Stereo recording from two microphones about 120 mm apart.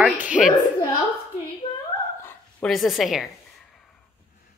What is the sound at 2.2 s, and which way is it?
Dog, 20° left (ahead or behind).